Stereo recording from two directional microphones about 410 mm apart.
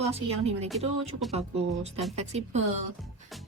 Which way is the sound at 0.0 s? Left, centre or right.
Centre.